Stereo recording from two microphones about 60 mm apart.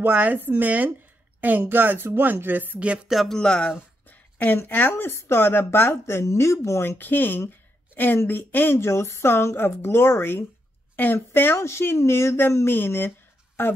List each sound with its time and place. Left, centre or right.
0.0 s speech: right
3.3 s speech: centre
4.1 s a sound: left
4.6 s speech: left
7.0 s speech: left
11.0 s speech: left
11.6 s speech: left